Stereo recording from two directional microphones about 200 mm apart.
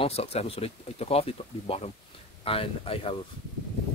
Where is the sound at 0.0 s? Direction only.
30° left (ahead or behind).